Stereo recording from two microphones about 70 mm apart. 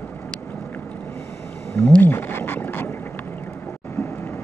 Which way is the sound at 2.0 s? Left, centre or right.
Left.